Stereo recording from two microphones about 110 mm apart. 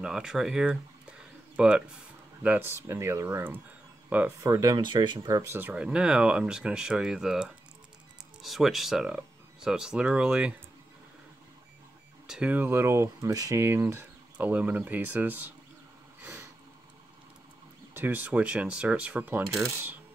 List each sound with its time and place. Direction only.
0.0 s speech: 5° right (ahead or behind)
2.7 s speech: 25° right (ahead or behind)
4.5 s speech: 35° right (ahead or behind)
5.3 s speech: 20° right (ahead or behind)
12.3 s speech: 10° right (ahead or behind)
12.6 s speech: 25° right (ahead or behind)
16.2 s a sound: 25° right (ahead or behind)
17.9 s speech: 15° right (ahead or behind)